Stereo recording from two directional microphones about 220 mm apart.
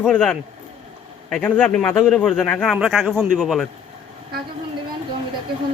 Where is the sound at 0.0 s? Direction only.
5° left (ahead or behind).